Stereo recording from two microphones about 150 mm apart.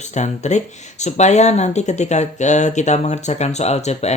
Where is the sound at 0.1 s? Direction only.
50° left (ahead or behind).